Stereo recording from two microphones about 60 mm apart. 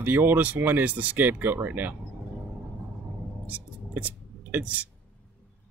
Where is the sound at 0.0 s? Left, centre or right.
Right.